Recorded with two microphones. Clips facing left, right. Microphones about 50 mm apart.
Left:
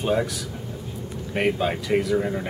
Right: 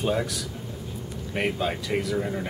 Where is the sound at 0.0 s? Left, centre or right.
Centre.